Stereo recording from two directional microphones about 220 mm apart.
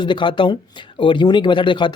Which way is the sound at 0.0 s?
20° left (ahead or behind).